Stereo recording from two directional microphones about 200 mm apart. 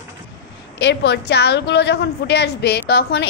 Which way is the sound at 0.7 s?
60° left (ahead or behind).